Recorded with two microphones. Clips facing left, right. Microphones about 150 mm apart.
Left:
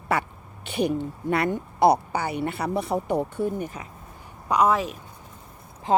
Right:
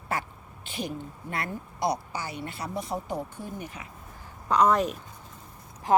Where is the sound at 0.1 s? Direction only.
70° left (ahead or behind); by 3.8 s 45° left (ahead or behind).